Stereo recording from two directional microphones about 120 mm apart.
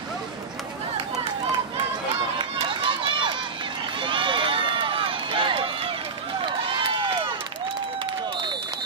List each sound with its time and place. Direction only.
2.3 s run: 45° right (ahead or behind)
7.0 s crowd: 45° right (ahead or behind)